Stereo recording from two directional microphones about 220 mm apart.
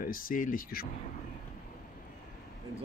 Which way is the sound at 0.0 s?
40° left (ahead or behind).